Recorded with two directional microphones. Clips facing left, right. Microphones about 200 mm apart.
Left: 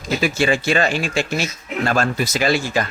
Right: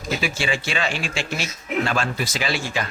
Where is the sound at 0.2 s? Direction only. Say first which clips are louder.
Left 7 dB; 45° left (ahead or behind).